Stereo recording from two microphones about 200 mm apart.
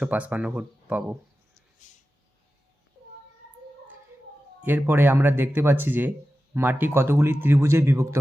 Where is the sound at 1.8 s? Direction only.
40° left (ahead or behind).